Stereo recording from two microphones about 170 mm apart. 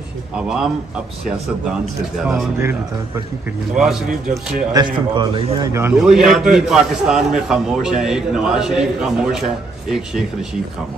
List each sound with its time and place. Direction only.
0.4 s a man's voice: 5° right (ahead or behind)
3.7 s a man's voice: centre (ahead or behind)
4.7 s a man's voice: 30° right (ahead or behind)
5.7 s a man's voice: 15° right (ahead or behind)
5.9 s a man's voice: 5° right (ahead or behind)